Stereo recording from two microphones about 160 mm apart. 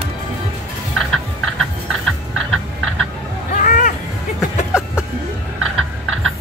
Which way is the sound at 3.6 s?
50° left (ahead or behind).